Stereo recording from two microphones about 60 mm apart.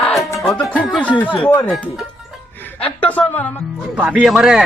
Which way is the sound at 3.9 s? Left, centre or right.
Right.